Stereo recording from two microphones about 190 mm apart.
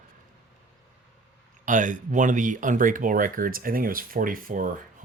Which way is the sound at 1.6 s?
45° right (ahead or behind).